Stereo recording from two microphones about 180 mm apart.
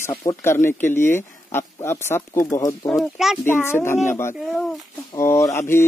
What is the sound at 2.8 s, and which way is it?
Speech, centre (ahead or behind).